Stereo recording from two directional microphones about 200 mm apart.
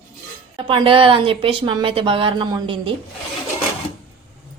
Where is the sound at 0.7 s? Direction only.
25° right (ahead or behind).